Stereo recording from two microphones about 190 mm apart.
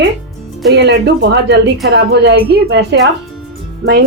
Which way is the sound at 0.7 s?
65° right (ahead or behind).